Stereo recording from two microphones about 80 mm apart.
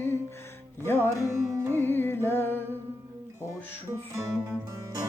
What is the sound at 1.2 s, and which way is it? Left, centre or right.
Music, right.